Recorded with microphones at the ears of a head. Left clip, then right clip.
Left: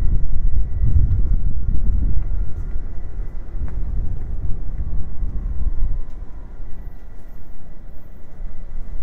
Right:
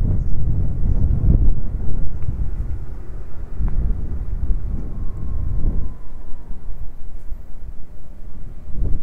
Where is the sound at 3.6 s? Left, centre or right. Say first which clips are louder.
Right 5 dB; right.